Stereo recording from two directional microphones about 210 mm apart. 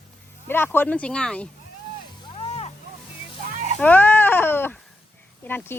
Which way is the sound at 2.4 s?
30° left (ahead or behind).